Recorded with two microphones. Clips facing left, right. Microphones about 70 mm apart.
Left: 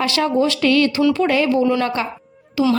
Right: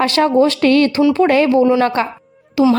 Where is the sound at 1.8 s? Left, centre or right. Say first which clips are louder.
Right 5 dB; right.